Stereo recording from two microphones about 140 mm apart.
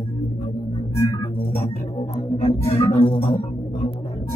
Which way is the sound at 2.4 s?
50° left (ahead or behind).